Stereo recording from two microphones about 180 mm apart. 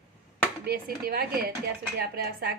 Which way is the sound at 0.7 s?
55° right (ahead or behind).